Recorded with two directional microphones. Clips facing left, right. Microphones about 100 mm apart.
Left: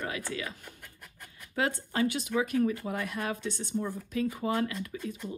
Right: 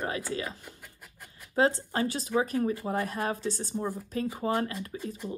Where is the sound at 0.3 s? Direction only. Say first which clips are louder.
Right 3 dB; 35° right (ahead or behind).